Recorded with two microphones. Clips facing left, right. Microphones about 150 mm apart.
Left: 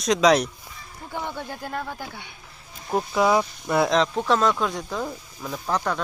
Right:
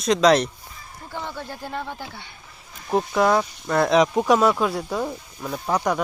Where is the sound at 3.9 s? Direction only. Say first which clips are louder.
Right 4 dB; 15° right (ahead or behind).